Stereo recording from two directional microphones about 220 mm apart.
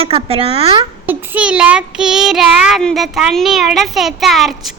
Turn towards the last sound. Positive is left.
turn(degrees=0)  # may be behind; listen again after turning